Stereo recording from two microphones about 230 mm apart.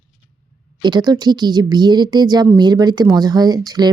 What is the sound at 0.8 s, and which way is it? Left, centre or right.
Speech, centre.